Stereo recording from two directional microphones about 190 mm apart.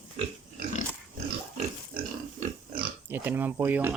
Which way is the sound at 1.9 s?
50° right (ahead or behind).